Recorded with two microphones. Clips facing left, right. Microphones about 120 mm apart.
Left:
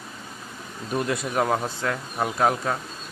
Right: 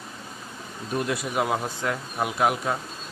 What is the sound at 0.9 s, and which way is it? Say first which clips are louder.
Speech: left 2 dB; centre (ahead or behind).